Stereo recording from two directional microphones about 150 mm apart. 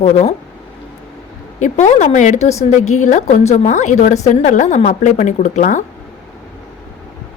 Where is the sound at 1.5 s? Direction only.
55° left (ahead or behind).